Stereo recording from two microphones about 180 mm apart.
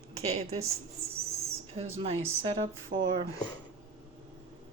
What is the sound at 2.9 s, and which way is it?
Speech, 45° right (ahead or behind).